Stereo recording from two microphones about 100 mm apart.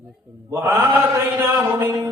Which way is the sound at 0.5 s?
30° right (ahead or behind).